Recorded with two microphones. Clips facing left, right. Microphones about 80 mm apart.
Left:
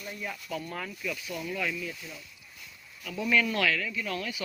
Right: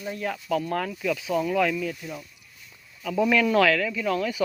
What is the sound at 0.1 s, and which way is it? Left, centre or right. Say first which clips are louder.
Speech: right 8 dB; right.